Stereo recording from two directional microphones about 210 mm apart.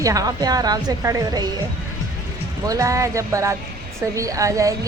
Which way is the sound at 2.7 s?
15° right (ahead or behind).